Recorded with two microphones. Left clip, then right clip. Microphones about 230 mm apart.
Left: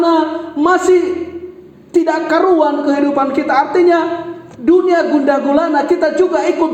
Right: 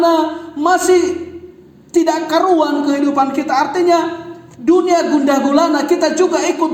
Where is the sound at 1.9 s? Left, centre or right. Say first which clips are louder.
Left 1 dB; right.